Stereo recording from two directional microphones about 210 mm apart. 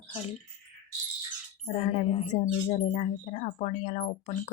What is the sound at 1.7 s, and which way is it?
Speech, 30° left (ahead or behind).